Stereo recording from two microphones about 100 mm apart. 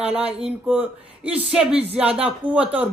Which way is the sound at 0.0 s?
10° right (ahead or behind).